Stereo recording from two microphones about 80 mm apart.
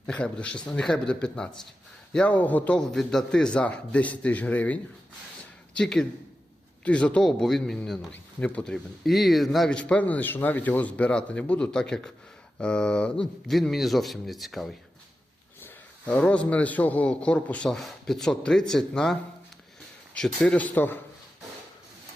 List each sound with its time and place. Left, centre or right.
0.0 s a man's voice: centre
2.7 s a man's voice: centre
9.0 s speech: centre
9.6 s a man's voice: centre
13.5 s speech: centre
16.0 s a man's voice: centre
20.1 s a man's voice: centre